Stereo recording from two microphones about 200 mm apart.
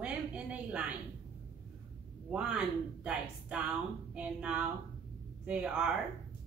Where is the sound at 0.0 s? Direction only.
5° right (ahead or behind).